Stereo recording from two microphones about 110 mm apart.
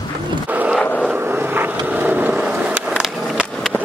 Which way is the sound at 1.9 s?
15° right (ahead or behind).